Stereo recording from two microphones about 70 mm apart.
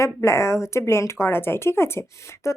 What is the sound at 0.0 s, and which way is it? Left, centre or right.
Speech, left.